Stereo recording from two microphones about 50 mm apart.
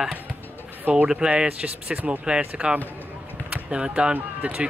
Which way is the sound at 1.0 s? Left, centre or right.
Centre.